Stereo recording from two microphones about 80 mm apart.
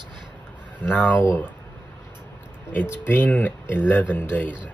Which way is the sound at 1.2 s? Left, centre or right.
Left.